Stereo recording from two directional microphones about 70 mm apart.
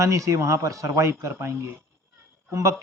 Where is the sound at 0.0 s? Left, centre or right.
Right.